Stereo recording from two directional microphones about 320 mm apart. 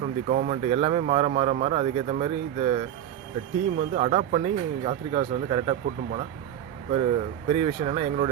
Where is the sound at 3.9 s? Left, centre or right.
Right.